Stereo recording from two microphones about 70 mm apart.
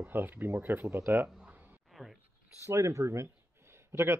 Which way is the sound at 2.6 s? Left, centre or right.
Right.